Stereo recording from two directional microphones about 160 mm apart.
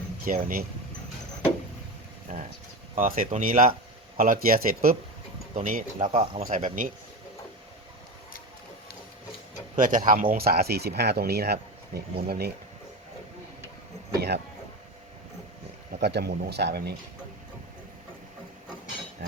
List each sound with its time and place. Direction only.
0.3 s speech: 60° right (ahead or behind)
2.3 s speech: 45° right (ahead or behind)
6.1 s speech: 40° right (ahead or behind)
6.4 s speech: 55° right (ahead or behind)
9.7 s speech: 55° right (ahead or behind); by 12.5 s 75° right (ahead or behind)
14.2 s speech: 90° right
16.0 s speech: 90° right